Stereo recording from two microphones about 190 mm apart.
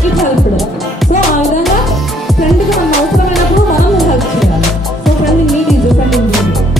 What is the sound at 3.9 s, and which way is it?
Music, centre (ahead or behind).